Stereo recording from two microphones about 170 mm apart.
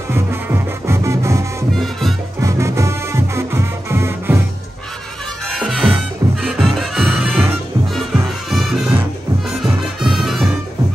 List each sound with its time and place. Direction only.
0.1 s music: 15° right (ahead or behind)
1.8 s music: centre (ahead or behind)
2.4 s music: 15° right (ahead or behind)
5.5 s music: centre (ahead or behind)